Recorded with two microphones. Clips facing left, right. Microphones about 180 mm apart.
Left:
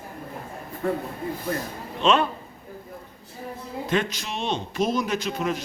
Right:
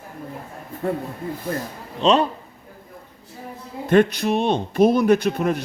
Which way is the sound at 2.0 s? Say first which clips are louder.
Right 3 dB; 35° right (ahead or behind).